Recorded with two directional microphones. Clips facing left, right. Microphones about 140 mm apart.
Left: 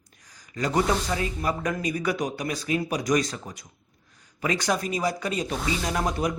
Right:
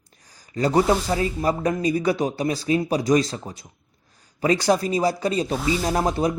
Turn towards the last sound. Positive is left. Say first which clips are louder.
# right 5 dB
turn(degrees=-30)  # may be behind; listen again after turning